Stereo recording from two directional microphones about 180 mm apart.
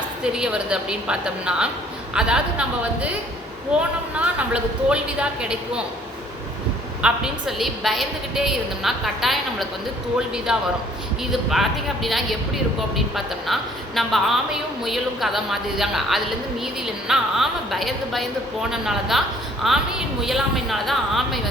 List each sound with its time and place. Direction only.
0.3 s a woman's voice: 5° right (ahead or behind)
4.2 s a woman's voice: 5° right (ahead or behind)
7.0 s a woman's voice: 5° right (ahead or behind)